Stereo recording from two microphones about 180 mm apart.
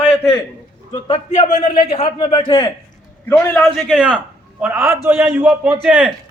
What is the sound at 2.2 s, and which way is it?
Speech, 20° left (ahead or behind).